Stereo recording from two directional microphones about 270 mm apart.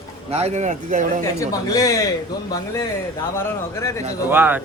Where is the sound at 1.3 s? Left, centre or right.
Centre.